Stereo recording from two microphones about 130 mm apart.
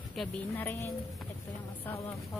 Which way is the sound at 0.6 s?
15° left (ahead or behind).